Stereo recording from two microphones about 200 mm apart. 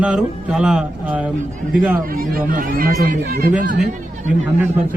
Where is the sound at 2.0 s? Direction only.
45° right (ahead or behind).